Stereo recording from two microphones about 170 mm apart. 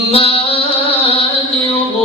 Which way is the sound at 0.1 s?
35° left (ahead or behind).